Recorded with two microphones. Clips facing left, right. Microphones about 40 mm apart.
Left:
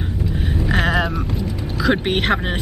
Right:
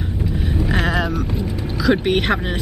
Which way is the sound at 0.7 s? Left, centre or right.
Centre.